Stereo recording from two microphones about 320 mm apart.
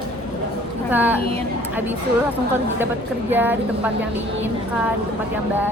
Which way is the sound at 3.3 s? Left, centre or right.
Centre.